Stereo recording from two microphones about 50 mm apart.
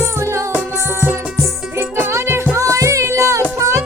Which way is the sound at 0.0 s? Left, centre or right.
Right.